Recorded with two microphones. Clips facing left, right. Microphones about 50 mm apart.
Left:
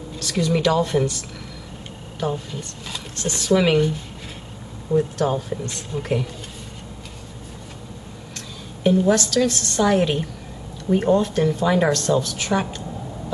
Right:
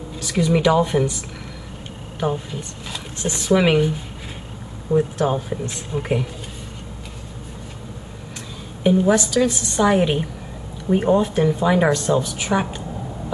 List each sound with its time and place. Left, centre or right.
0.2 s a woman's voice: centre
8.8 s a woman's voice: centre